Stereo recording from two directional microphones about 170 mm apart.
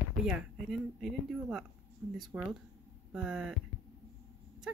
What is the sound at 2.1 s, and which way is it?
Speech, 25° right (ahead or behind).